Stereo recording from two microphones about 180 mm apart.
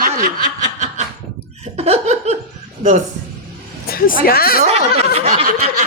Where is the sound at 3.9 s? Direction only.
55° left (ahead or behind).